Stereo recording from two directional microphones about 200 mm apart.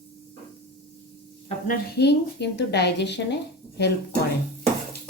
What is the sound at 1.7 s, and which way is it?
A woman's voice, 55° left (ahead or behind).